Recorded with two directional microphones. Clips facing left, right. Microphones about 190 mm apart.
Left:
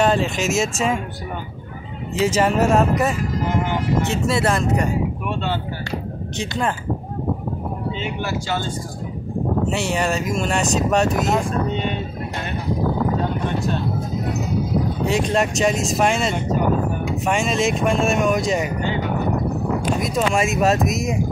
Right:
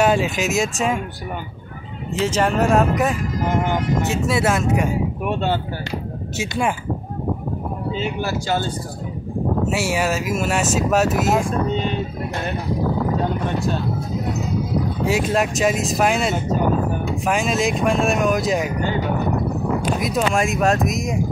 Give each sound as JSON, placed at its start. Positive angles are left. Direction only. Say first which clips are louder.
{"t": 0.0, "sound": "speech", "louder": "right 1 dB", "side_deg": -5}
{"t": 2.1, "sound": "speech", "louder": "left 1 dB", "side_deg": 10}
{"t": 5.3, "sound": "speech", "louder": "right 5 dB", "side_deg": -45}
{"t": 6.3, "sound": "speech", "louder": "right 1 dB", "side_deg": -10}
{"t": 7.9, "sound": "speech", "louder": "right 5 dB", "side_deg": -40}
{"t": 9.7, "sound": "speech", "louder": "right 1 dB", "side_deg": -5}
{"t": 15.0, "sound": "speech", "louder": "right 1 dB", "side_deg": 0}
{"t": 20.0, "sound": "speech", "louder": "even", "side_deg": 0}